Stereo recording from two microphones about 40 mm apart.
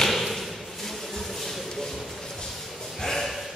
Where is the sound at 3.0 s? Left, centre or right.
Centre.